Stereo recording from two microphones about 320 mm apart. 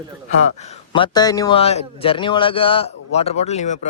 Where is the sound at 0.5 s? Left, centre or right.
Centre.